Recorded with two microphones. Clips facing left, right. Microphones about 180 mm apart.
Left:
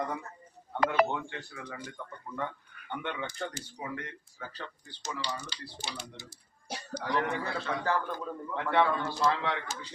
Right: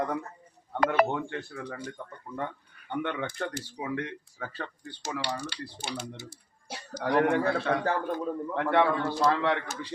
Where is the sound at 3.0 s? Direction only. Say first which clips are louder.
Right 5 dB; 55° right (ahead or behind).